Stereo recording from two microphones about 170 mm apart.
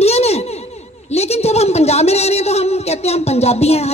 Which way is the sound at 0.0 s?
40° left (ahead or behind).